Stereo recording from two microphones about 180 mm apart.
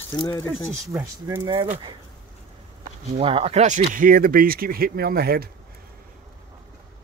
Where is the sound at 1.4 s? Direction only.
30° right (ahead or behind).